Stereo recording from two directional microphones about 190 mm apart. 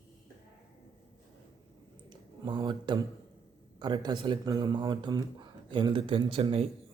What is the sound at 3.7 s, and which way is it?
Speech, 25° right (ahead or behind).